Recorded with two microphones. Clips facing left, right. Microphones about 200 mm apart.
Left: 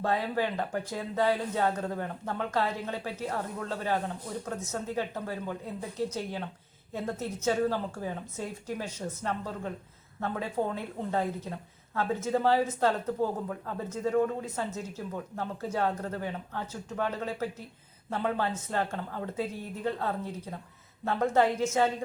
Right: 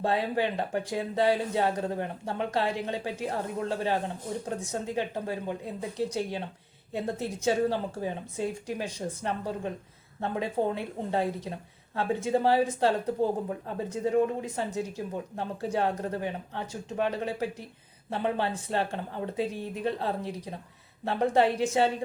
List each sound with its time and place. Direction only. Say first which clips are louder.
0.0 s a woman's voice: right 2 dB; 15° right (ahead or behind)
12.9 s a woman's voice: right 3 dB; 35° right (ahead or behind)
13.7 s a woman's voice: right 1 dB; 15° right (ahead or behind)